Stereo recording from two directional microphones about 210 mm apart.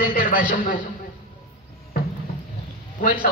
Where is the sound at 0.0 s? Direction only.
40° left (ahead or behind).